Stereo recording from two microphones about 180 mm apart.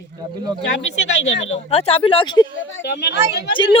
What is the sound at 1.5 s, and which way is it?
Speech, 35° left (ahead or behind).